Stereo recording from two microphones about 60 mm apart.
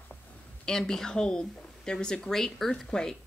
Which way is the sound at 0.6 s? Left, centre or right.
Centre.